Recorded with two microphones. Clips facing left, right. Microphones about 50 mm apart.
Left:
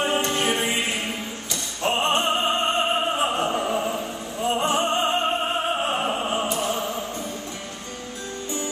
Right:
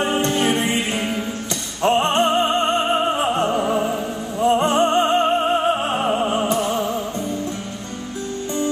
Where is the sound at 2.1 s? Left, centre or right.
Centre.